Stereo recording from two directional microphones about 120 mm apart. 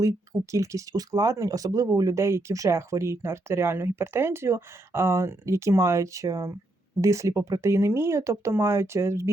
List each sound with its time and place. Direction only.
0.5 s speech: 25° right (ahead or behind)